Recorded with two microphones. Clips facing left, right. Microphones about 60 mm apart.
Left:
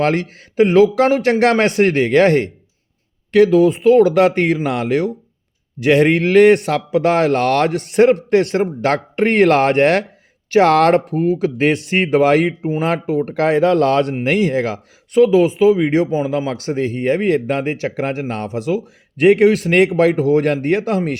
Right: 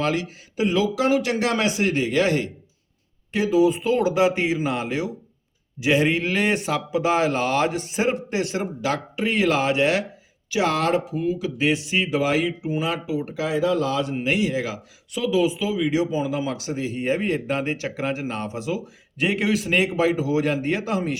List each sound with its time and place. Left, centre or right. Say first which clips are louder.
0.0 s speech: left 7 dB; left
3.3 s speech: left 8 dB; left
16.5 s speech: left 7 dB; left